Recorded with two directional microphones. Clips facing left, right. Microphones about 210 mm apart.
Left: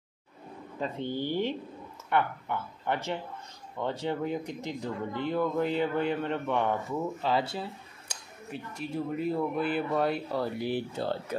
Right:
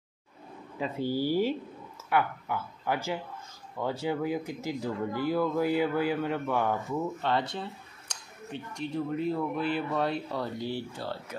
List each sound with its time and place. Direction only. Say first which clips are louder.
0.7 s speech: right 3 dB; 5° right (ahead or behind)
10.6 s speech: left 3 dB; 15° left (ahead or behind)